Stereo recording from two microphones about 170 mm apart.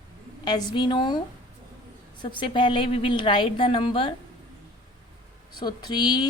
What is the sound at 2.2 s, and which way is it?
Speech, 30° left (ahead or behind).